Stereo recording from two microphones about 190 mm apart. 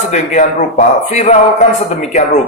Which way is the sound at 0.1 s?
40° left (ahead or behind).